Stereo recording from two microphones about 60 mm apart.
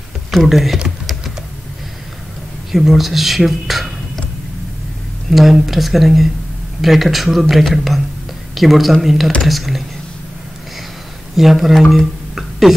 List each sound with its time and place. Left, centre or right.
0.3 s speech: centre
2.7 s speech: centre
5.3 s speech: centre
11.3 s speech: centre
11.9 s music: centre